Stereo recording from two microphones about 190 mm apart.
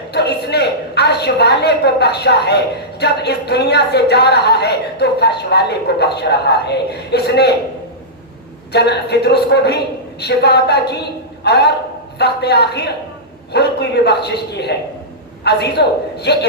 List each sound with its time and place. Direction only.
0.1 s a woman's voice: 60° left (ahead or behind)
8.7 s a woman's voice: 60° left (ahead or behind)